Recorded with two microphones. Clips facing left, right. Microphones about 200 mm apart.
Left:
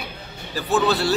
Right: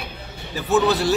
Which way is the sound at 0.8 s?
15° right (ahead or behind).